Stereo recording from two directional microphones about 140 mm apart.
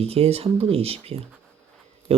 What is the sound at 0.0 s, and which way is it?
Speech, 45° right (ahead or behind).